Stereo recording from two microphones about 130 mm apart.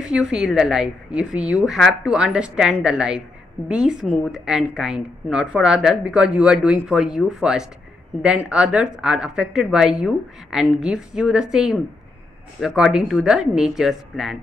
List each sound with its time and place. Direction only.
0.0 s speech: 5° right (ahead or behind)